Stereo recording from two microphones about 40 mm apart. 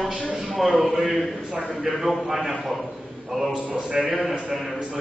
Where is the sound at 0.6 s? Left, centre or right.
Centre.